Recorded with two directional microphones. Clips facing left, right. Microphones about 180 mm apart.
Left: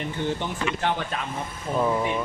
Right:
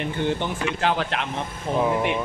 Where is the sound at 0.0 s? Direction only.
65° right (ahead or behind).